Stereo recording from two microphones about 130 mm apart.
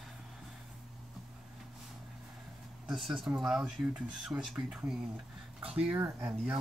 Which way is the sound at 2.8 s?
Centre (ahead or behind).